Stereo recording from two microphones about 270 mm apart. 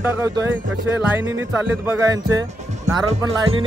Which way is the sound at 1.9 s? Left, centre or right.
Centre.